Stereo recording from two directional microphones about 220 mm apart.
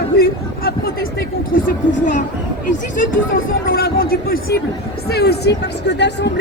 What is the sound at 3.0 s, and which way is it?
Speech, 40° left (ahead or behind).